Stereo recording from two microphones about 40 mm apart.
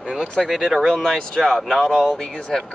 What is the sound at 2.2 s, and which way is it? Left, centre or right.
Speech, centre.